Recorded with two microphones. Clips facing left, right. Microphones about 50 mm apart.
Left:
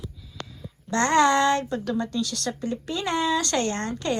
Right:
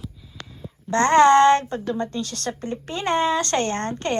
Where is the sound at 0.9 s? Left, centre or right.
Right.